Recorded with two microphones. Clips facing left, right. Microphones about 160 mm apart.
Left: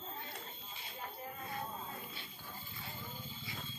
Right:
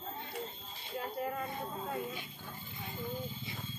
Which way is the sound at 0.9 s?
75° right (ahead or behind).